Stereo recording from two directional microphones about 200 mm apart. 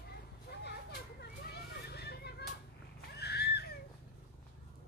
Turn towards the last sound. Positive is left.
turn(degrees=55)  # may be behind; listen again after turning